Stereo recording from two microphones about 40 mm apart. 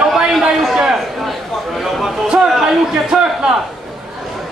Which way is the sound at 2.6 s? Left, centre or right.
Centre.